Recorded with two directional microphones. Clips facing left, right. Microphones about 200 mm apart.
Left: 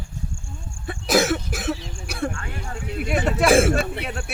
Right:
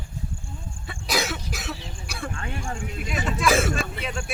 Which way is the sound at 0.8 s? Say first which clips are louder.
Left 8 dB; 50° left (ahead or behind).